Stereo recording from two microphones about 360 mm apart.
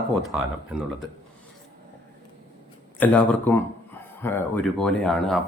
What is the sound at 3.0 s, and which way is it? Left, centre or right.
Speech, centre.